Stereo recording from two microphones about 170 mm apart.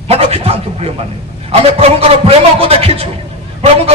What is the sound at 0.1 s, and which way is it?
A man's voice, 35° right (ahead or behind).